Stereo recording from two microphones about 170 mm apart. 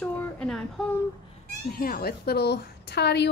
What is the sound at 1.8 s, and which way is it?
A woman's voice, 60° left (ahead or behind).